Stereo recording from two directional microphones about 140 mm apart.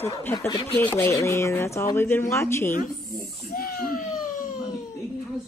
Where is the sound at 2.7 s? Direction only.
80° left.